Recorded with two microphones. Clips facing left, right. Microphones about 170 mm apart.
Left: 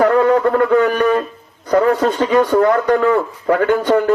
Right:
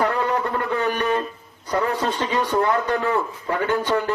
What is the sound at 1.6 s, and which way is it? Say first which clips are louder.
A man's voice: left 9 dB; 50° left (ahead or behind).